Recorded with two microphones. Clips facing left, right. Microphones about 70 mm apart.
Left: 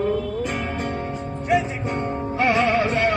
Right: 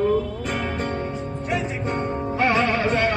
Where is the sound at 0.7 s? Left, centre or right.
Centre.